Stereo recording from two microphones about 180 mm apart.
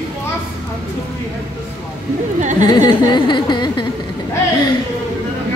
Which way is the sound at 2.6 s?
25° left (ahead or behind).